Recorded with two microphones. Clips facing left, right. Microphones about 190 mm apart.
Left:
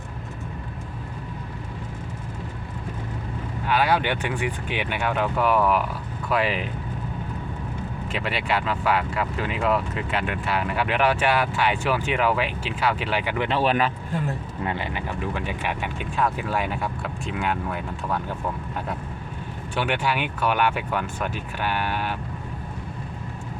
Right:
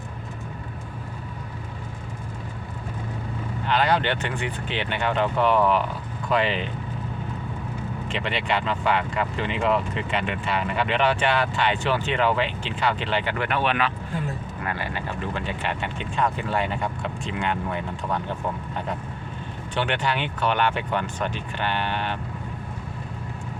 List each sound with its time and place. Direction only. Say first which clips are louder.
3.7 s speech: even; 10° left (ahead or behind)
8.1 s speech: even; 5° left (ahead or behind)
13.5 s speech: left 3 dB; 35° left (ahead or behind)
14.6 s speech: left 2 dB; 20° left (ahead or behind); by 18.2 s 5° left (ahead or behind)
19.7 s speech: left 1 dB; 10° left (ahead or behind)